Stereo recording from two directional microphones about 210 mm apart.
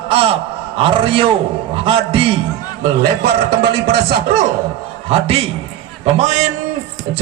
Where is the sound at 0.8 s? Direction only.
25° right (ahead or behind).